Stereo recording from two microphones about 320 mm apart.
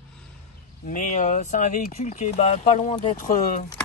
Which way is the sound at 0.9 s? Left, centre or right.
Left.